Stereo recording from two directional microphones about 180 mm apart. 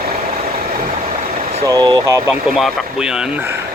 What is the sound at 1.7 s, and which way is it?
Speech, 20° right (ahead or behind).